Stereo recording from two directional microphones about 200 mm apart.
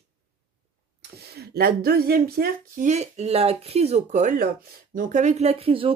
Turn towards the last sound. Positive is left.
turn(degrees=-30)  # may be behind; listen again after turning